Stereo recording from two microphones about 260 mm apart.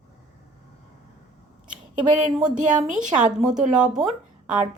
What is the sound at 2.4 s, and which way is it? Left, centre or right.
Speech, right.